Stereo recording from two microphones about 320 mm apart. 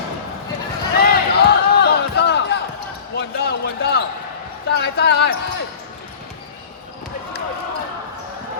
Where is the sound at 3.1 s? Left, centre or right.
Left.